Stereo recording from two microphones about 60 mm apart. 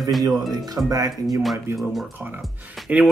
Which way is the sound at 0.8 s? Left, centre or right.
Right.